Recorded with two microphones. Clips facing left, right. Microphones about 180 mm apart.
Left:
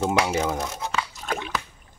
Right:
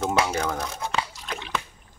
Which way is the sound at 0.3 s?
15° left (ahead or behind).